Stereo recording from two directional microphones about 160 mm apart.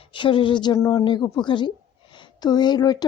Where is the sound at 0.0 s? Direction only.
30° left (ahead or behind).